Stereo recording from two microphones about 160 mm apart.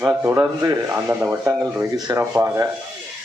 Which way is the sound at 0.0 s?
15° right (ahead or behind).